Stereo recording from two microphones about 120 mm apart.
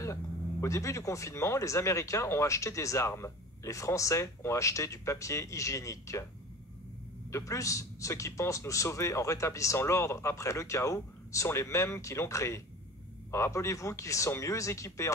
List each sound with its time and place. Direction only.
0.0 s speech: 25° left (ahead or behind)
7.2 s speech: 25° left (ahead or behind)